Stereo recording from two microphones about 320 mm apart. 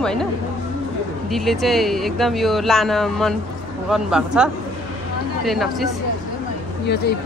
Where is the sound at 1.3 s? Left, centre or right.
Centre.